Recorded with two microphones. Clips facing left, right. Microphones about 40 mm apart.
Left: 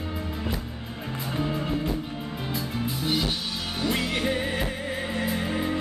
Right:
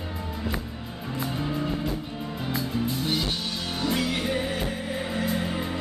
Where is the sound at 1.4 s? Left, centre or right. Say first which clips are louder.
Left 2 dB; centre.